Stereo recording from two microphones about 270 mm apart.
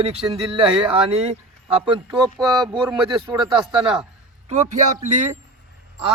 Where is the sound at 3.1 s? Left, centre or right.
Centre.